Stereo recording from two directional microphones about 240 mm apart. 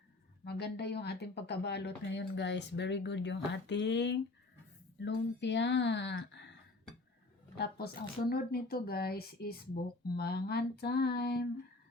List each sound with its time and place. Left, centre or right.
0.4 s speech: left
7.5 s speech: left